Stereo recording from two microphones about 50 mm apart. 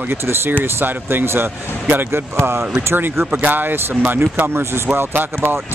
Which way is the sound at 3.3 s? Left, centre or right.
Right.